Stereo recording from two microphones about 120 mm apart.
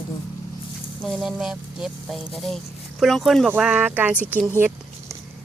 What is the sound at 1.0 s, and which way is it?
Speech, centre (ahead or behind).